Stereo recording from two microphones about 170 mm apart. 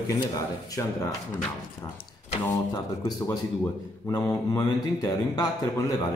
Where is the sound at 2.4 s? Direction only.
20° left (ahead or behind).